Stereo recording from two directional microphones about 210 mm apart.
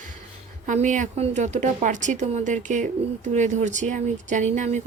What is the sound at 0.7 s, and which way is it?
Speech, 35° right (ahead or behind).